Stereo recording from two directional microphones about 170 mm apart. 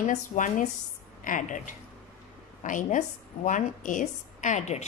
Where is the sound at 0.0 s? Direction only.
45° left (ahead or behind).